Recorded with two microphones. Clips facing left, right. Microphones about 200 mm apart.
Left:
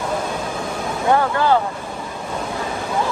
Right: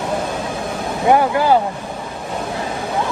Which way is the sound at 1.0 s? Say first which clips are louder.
Right 3 dB; 15° right (ahead or behind).